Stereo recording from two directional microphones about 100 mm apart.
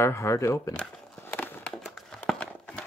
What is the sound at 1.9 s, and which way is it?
Run, 5° left (ahead or behind).